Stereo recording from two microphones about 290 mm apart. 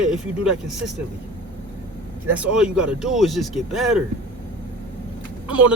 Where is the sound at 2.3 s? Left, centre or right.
Centre.